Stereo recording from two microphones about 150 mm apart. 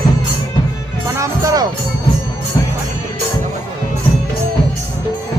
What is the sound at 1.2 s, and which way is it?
Music, 25° right (ahead or behind).